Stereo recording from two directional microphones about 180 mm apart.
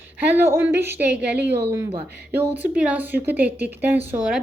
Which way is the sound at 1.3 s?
65° right (ahead or behind).